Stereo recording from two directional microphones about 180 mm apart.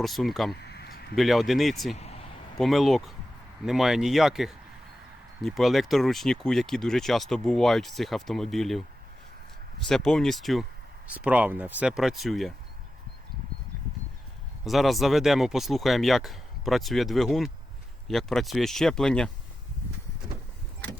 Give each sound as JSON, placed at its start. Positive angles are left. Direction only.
{"t": 0.0, "sound": "speech", "side_deg": 0}
{"t": 0.6, "sound": "a sound", "side_deg": 65}
{"t": 1.1, "sound": "speech", "side_deg": 0}
{"t": 2.0, "sound": "a sound", "side_deg": 35}
{"t": 2.6, "sound": "speech", "side_deg": 0}
{"t": 9.9, "sound": "speech", "side_deg": 0}
{"t": 14.6, "sound": "speech", "side_deg": 0}